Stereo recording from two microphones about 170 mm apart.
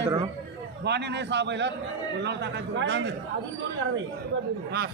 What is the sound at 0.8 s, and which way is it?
Speech, 85° right.